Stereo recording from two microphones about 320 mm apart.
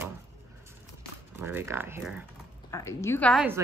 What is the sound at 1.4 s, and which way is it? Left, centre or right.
Speech, centre.